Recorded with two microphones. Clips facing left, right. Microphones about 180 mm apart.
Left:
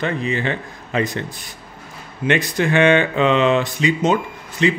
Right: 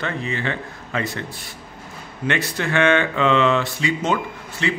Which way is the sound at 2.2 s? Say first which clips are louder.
Left 5 dB; 15° left (ahead or behind).